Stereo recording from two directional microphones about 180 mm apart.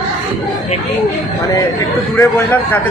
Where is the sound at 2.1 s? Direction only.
10° left (ahead or behind).